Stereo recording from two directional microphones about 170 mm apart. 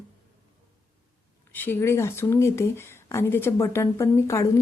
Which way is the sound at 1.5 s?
10° left (ahead or behind).